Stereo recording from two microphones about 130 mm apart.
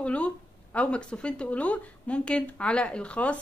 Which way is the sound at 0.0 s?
10° left (ahead or behind).